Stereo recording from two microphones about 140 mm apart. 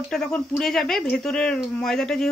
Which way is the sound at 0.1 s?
5° left (ahead or behind).